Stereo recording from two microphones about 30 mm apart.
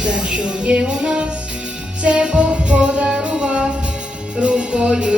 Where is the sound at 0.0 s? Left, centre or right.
Right.